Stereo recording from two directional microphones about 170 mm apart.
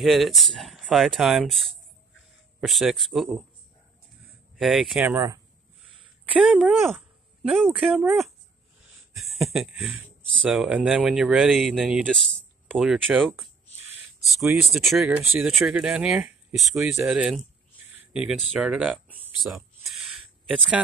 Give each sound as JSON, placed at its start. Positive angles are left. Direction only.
{"t": 0.0, "sound": "speech", "side_deg": 0}
{"t": 4.6, "sound": "speech", "side_deg": 0}
{"t": 5.0, "sound": "speech", "side_deg": -15}
{"t": 6.2, "sound": "speech", "side_deg": -5}
{"t": 9.1, "sound": "speech", "side_deg": 0}
{"t": 19.9, "sound": "a sound", "side_deg": 0}